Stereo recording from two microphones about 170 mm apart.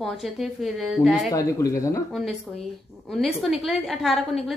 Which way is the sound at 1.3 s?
20° left (ahead or behind).